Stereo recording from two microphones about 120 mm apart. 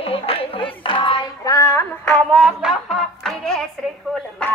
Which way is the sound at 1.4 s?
25° left (ahead or behind).